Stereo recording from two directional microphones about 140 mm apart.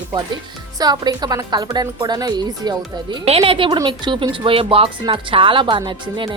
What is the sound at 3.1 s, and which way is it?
Speech, 45° right (ahead or behind).